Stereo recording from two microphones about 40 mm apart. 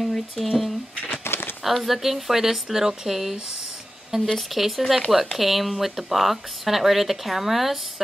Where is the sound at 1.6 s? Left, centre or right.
Centre.